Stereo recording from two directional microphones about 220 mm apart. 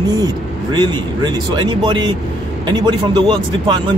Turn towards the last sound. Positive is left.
turn(degrees=-20)  # may be behind; listen again after turning